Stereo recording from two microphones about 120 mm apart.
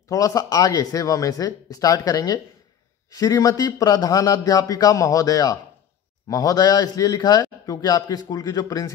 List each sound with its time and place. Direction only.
0.1 s a man's voice: 30° left (ahead or behind)